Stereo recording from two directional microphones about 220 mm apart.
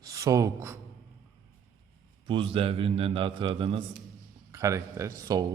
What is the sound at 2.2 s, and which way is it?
A man's voice, 25° right (ahead or behind).